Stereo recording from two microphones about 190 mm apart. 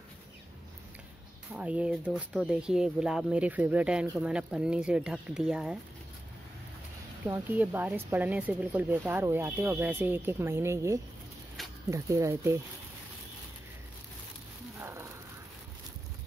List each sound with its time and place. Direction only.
1.5 s speech: 5° right (ahead or behind)
7.2 s speech: 10° right (ahead or behind)
14.8 s a sound: 15° right (ahead or behind)